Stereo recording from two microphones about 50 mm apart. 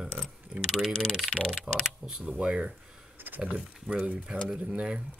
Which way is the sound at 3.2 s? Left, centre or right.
Right.